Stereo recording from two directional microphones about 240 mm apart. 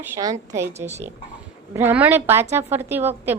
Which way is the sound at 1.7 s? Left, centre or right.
Centre.